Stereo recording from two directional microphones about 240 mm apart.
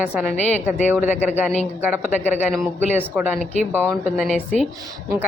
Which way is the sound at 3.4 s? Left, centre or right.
Right.